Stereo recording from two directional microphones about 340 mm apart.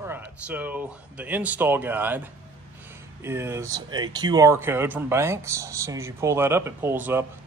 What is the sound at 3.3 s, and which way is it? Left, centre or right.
Speech, centre.